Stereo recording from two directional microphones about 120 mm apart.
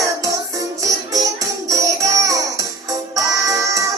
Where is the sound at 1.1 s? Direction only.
30° right (ahead or behind).